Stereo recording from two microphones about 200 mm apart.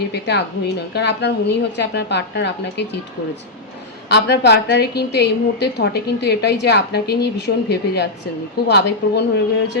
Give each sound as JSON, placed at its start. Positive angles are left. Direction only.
{"t": 0.1, "sound": "a woman's voice", "side_deg": 55}
{"t": 4.1, "sound": "a woman's voice", "side_deg": 55}